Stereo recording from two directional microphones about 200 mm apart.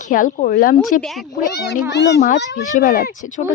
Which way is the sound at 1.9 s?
60° left (ahead or behind).